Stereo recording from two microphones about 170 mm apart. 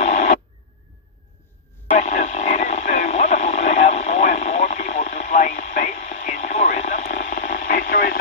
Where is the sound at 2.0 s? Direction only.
45° left (ahead or behind).